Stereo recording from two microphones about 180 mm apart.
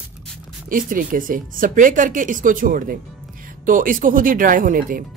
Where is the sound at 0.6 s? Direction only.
50° right (ahead or behind).